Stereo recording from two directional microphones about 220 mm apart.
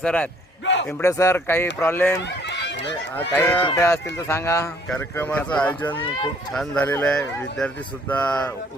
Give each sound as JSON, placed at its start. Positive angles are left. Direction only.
{"t": 0.0, "sound": "speech", "side_deg": 5}
{"t": 0.6, "sound": "a sound", "side_deg": 55}
{"t": 0.9, "sound": "speech", "side_deg": 5}
{"t": 2.1, "sound": "run", "side_deg": 50}
{"t": 3.3, "sound": "speech", "side_deg": 10}